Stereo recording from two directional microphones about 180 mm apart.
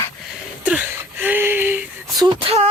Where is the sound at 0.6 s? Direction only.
5° right (ahead or behind).